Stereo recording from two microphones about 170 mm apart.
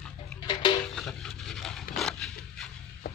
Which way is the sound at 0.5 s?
25° left (ahead or behind).